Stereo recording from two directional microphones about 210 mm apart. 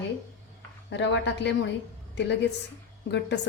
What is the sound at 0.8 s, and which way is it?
Speech, 55° left (ahead or behind).